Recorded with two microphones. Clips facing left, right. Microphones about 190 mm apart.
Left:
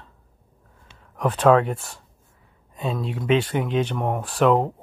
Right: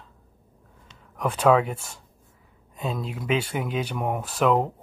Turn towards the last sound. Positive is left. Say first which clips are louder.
# left 3 dB
turn(degrees=0)  # may be behind; listen again after turning